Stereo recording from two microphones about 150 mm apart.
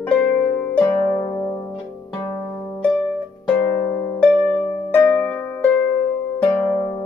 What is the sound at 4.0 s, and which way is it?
Harp, 10° left (ahead or behind).